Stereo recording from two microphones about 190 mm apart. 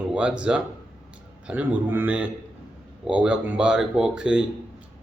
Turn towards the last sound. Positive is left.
turn(degrees=-5)  # may be behind; listen again after turning